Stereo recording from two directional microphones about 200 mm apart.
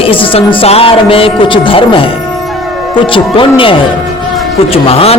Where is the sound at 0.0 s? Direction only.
25° left (ahead or behind).